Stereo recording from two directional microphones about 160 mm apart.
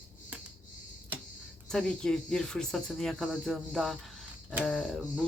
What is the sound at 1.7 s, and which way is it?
Speech, 5° left (ahead or behind).